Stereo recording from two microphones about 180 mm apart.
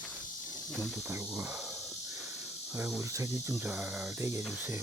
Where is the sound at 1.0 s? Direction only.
15° right (ahead or behind).